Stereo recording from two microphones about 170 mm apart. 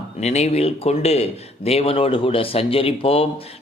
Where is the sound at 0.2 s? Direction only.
40° left (ahead or behind).